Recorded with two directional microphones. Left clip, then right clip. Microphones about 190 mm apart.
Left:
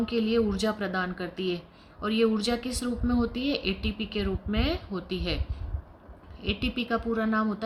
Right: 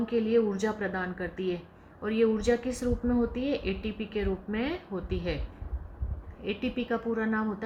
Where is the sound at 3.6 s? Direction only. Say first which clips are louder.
Left 3 dB; 60° left (ahead or behind).